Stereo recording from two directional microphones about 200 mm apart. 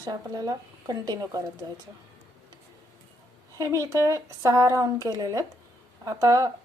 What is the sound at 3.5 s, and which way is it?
Speech, 15° right (ahead or behind).